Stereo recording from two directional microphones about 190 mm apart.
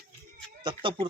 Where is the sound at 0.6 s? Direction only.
25° right (ahead or behind).